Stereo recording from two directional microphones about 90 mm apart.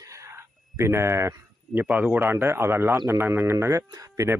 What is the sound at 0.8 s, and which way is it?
Speech, 30° right (ahead or behind).